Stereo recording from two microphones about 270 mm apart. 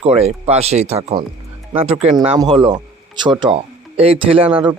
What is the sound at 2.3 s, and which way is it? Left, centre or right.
Speech, centre.